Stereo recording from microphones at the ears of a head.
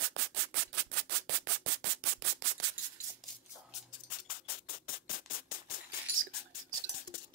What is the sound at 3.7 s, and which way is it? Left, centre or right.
Rub, left.